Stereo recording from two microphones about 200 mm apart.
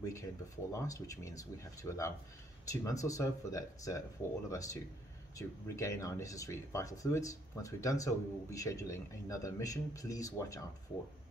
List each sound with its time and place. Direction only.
0.1 s speech: 15° left (ahead or behind)